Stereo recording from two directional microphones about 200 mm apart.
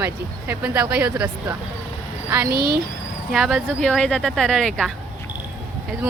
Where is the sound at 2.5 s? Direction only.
50° right (ahead or behind).